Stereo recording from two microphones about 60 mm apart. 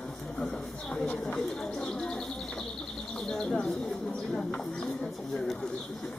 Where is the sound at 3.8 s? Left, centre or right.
Centre.